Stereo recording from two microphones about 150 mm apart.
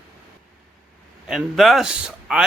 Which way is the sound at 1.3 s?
Centre (ahead or behind).